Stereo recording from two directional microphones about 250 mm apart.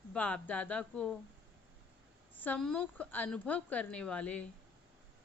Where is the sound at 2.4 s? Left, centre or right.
Centre.